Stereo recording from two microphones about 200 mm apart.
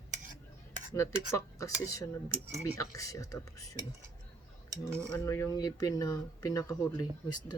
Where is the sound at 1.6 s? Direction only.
15° left (ahead or behind).